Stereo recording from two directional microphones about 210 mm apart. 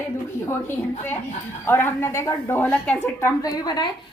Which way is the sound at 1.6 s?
10° left (ahead or behind).